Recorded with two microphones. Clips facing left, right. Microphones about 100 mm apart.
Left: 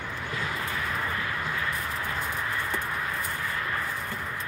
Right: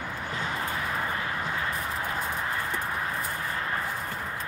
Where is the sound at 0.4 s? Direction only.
30° right (ahead or behind).